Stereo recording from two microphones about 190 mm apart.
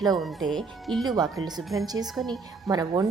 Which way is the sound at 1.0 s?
20° right (ahead or behind).